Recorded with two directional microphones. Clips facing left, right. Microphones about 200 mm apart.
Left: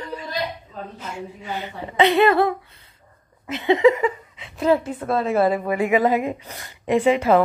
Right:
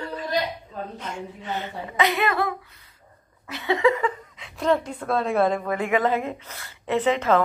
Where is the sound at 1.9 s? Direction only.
30° left (ahead or behind).